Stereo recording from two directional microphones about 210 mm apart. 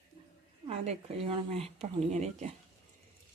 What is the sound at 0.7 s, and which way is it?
Speech, 30° right (ahead or behind).